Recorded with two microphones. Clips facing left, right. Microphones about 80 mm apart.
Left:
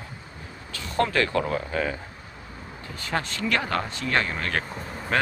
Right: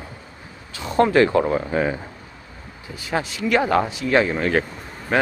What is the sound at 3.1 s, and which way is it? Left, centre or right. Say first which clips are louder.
Speech: right 6 dB; centre.